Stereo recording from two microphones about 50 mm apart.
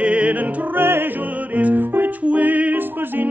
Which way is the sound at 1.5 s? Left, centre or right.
Right.